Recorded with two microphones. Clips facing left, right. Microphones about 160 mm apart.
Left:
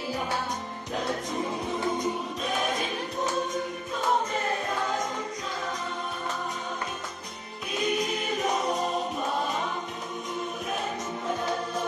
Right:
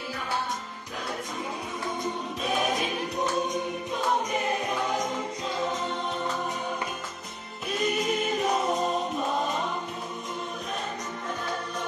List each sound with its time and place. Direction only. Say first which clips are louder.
2.4 s choir: right 3 dB; centre (ahead or behind)
4.3 s choir: right 1 dB; 20° right (ahead or behind)
7.8 s choir: right 1 dB; centre (ahead or behind)